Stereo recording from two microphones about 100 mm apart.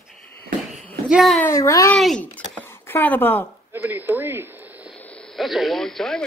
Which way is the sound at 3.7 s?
20° right (ahead or behind).